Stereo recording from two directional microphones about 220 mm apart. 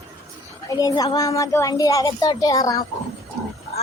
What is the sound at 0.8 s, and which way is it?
Speech, 15° left (ahead or behind).